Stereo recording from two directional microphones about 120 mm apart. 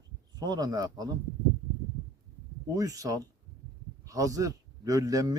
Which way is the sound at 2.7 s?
30° right (ahead or behind).